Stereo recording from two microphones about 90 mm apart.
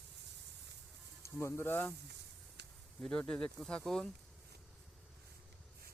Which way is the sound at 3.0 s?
10° left (ahead or behind).